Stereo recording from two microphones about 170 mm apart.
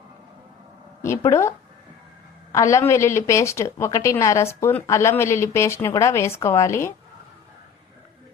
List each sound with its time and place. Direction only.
1.0 s a woman's voice: 15° left (ahead or behind)